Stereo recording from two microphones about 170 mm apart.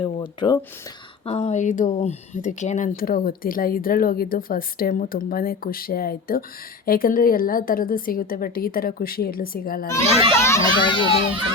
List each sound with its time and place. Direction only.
0.0 s speech: 30° left (ahead or behind)
1.2 s speech: 40° left (ahead or behind); by 9.9 s 60° left (ahead or behind)
10.3 s a child's voice: 15° left (ahead or behind)
10.8 s a child's voice: 30° left (ahead or behind)